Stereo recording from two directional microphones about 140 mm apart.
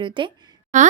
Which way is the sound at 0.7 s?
60° right (ahead or behind).